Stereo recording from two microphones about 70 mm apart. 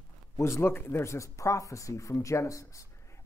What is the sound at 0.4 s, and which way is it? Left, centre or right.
Speech, left.